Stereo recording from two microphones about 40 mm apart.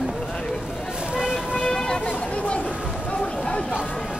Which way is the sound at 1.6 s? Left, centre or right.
Centre.